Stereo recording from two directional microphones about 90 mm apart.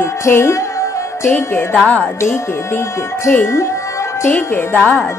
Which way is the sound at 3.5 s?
30° left (ahead or behind).